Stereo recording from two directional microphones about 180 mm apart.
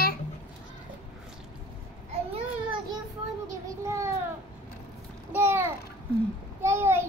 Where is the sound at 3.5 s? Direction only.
15° right (ahead or behind).